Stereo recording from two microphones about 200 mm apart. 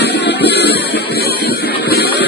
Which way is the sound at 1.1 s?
50° left (ahead or behind).